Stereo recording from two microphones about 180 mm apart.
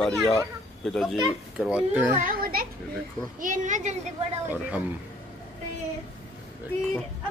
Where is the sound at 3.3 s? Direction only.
45° right (ahead or behind).